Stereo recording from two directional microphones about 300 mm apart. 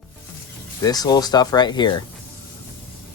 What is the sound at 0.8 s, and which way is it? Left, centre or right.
Speech, centre.